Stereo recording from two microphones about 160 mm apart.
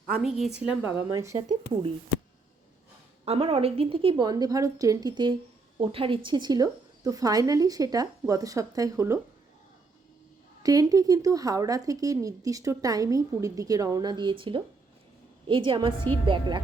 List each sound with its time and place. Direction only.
0.1 s a woman's voice: 5° right (ahead or behind); by 1.5 s 20° right (ahead or behind)
3.2 s speech: 40° right (ahead or behind); by 9.1 s 20° right (ahead or behind)
10.6 s a woman's voice: 20° right (ahead or behind)